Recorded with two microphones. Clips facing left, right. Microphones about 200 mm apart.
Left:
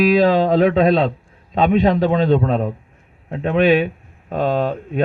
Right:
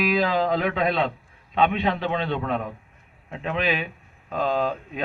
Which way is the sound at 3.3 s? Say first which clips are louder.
Left 11 dB; 50° left (ahead or behind).